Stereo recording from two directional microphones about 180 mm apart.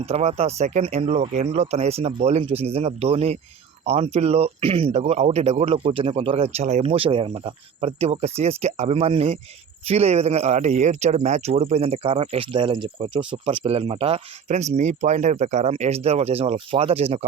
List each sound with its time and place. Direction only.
0.0 s speech: 35° right (ahead or behind)